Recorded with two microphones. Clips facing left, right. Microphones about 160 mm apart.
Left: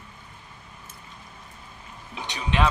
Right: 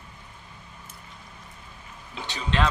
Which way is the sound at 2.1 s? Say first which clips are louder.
Even; 15° left (ahead or behind).